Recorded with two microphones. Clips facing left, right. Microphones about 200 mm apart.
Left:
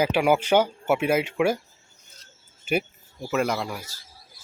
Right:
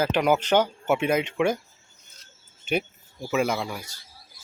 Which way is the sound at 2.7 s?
5° left (ahead or behind).